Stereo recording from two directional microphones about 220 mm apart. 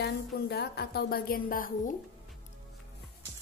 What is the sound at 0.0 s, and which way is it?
Speech, 45° left (ahead or behind).